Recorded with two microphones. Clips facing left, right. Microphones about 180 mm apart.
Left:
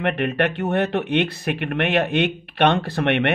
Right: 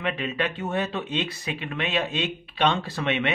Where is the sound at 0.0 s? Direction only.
60° left (ahead or behind).